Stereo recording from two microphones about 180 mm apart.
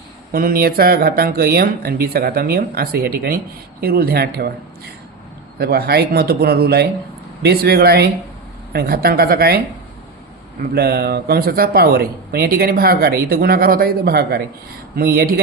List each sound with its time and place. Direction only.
0.3 s speech: 55° right (ahead or behind)
5.5 s speech: 60° right (ahead or behind)
10.6 s speech: 60° right (ahead or behind)